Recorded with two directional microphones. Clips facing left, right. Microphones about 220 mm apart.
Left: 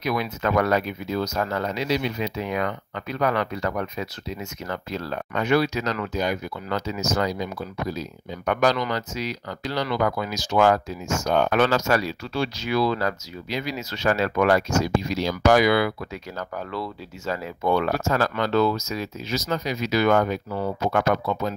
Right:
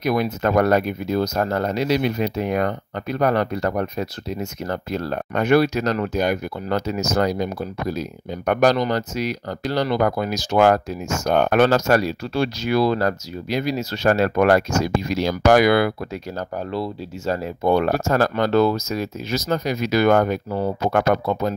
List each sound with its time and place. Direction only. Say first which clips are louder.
0.0 s speech: right 5 dB; 45° right (ahead or behind)
16.3 s speech: right 4 dB; 30° right (ahead or behind)
17.6 s speech: right 4 dB; 45° right (ahead or behind)